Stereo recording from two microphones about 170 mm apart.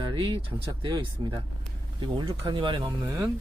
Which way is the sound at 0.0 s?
30° right (ahead or behind).